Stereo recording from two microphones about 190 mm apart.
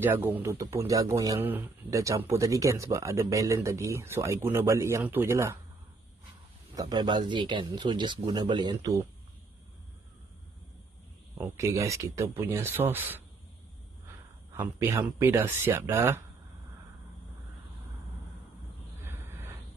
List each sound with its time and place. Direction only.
0.0 s speech: 10° right (ahead or behind)
6.7 s speech: 20° right (ahead or behind)
11.3 s speech: 15° right (ahead or behind)
14.5 s speech: 10° right (ahead or behind)
19.0 s a sound: 10° right (ahead or behind)